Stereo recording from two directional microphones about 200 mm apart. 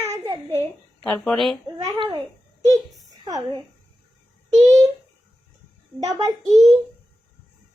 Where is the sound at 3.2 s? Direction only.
20° right (ahead or behind).